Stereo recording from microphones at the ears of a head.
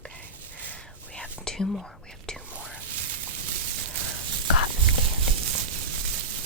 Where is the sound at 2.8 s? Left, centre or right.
Right.